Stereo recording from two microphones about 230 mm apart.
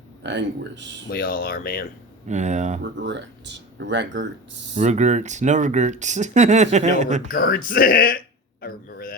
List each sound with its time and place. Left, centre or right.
0.2 s speech: right
1.0 s speech: left
2.2 s speech: right
2.8 s speech: right
4.8 s speech: right
7.3 s speech: left
8.6 s a sound: left